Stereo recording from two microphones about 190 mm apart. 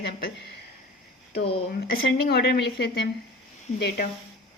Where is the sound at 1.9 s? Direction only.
55° left (ahead or behind).